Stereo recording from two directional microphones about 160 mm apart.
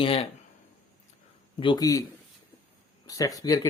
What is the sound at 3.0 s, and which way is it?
Speech, 20° left (ahead or behind).